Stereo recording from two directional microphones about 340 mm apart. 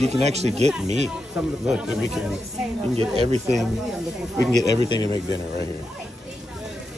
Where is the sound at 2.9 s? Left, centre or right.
Centre.